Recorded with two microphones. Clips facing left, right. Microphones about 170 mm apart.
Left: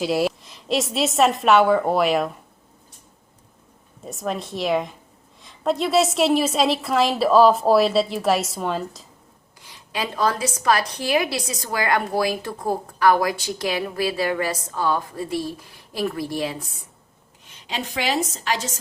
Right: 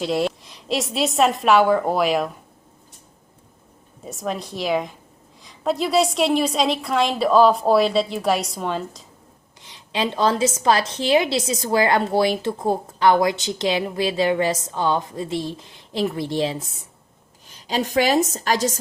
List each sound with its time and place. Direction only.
0.0 s a woman's voice: 5° left (ahead or behind)
4.0 s a woman's voice: centre (ahead or behind)
9.6 s speech: 25° right (ahead or behind)
17.4 s a woman's voice: 35° right (ahead or behind)